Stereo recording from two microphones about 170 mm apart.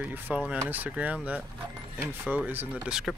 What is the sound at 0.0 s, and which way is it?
Speech, 10° right (ahead or behind).